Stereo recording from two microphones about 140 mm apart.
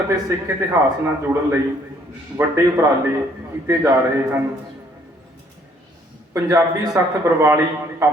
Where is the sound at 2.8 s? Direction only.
15° right (ahead or behind).